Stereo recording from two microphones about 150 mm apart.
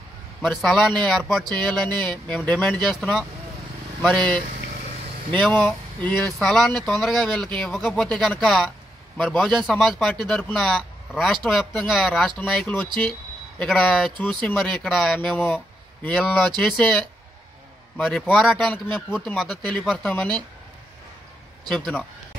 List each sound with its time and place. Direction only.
0.4 s speech: centre (ahead or behind)
12.8 s speech: 30° right (ahead or behind)
13.6 s speech: 5° left (ahead or behind)
21.6 s speech: 5° left (ahead or behind)